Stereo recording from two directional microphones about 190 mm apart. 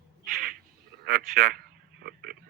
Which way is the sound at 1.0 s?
50° right (ahead or behind).